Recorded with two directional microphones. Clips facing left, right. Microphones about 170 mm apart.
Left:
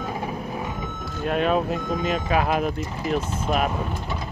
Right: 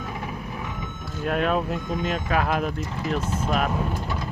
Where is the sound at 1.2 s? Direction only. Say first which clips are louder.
Left 2 dB; centre (ahead or behind).